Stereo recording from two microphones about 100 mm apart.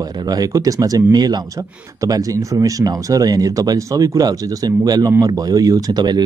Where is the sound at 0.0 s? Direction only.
40° right (ahead or behind).